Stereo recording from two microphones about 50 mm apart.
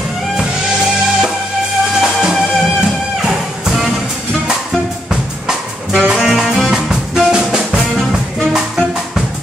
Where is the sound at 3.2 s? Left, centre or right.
Centre.